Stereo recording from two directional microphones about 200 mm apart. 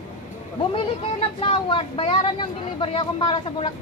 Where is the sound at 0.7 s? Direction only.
30° left (ahead or behind).